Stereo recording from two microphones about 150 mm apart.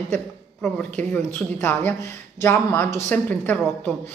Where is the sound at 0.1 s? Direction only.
5° left (ahead or behind).